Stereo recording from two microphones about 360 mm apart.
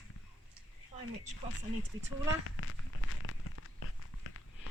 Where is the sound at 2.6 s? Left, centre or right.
Left.